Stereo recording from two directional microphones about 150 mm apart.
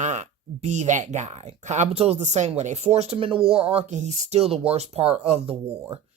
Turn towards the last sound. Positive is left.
turn(degrees=-40)  # may be behind; listen again after turning